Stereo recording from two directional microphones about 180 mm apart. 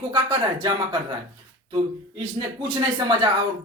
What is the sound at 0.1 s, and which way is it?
Speech, 25° right (ahead or behind).